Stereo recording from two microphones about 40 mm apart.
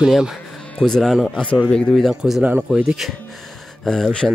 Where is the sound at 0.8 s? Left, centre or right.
Centre.